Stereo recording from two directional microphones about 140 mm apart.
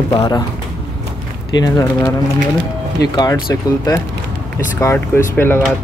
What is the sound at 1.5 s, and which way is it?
Speech, 25° left (ahead or behind).